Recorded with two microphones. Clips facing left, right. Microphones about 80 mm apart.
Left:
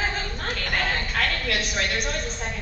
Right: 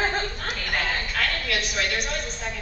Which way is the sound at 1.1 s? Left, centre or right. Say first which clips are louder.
Left 1 dB; left.